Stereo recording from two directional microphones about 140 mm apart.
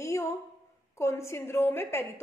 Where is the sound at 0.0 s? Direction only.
20° left (ahead or behind).